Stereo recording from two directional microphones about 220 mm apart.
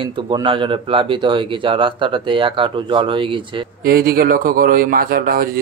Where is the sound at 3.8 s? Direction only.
45° right (ahead or behind).